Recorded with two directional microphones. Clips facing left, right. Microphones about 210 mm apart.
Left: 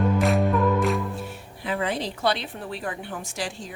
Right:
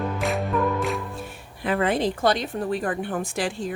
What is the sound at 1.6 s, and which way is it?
A woman's voice, 55° right (ahead or behind).